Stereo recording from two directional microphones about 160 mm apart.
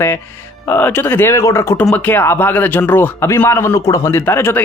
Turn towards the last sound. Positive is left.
turn(degrees=15)  # may be behind; listen again after turning